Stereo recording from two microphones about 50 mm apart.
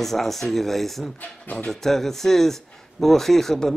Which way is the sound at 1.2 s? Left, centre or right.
Left.